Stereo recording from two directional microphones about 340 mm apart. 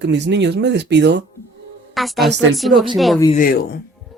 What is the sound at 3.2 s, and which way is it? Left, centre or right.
Speech, left.